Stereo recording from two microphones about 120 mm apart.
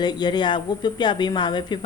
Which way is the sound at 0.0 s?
35° left (ahead or behind).